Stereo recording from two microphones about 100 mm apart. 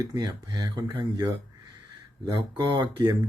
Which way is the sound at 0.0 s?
40° right (ahead or behind).